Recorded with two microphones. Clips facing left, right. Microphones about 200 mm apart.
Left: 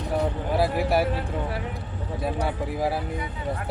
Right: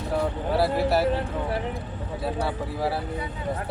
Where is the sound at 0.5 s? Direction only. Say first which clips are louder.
Right 1 dB; 15° left (ahead or behind).